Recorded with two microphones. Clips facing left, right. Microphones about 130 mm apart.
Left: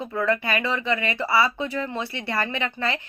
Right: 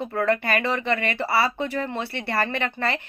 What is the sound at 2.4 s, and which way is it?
Speech, 50° right (ahead or behind).